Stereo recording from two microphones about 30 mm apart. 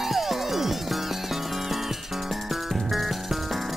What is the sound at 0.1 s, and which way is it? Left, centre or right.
Music, centre.